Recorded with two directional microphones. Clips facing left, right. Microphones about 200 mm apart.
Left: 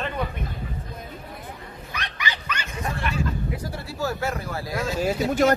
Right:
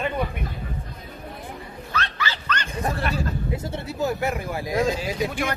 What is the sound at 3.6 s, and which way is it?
Speech, 20° right (ahead or behind).